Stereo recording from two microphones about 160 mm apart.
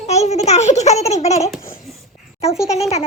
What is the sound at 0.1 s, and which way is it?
A child's voice, 45° left (ahead or behind).